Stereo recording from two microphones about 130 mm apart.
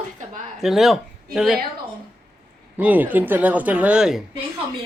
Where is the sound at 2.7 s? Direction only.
15° right (ahead or behind).